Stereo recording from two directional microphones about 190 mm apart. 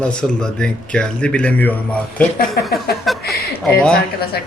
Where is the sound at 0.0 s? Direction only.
5° left (ahead or behind).